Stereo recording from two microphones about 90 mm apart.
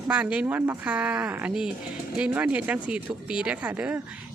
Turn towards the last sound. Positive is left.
turn(degrees=-15)  # may be behind; listen again after turning